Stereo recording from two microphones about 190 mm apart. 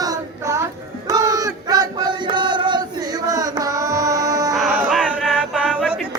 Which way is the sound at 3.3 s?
20° right (ahead or behind).